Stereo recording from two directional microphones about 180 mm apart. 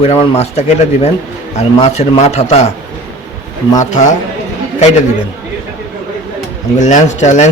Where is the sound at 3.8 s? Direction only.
40° left (ahead or behind).